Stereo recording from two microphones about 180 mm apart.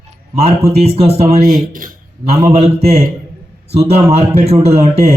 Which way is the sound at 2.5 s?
35° right (ahead or behind).